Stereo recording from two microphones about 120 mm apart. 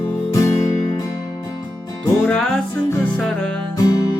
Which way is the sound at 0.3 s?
25° left (ahead or behind).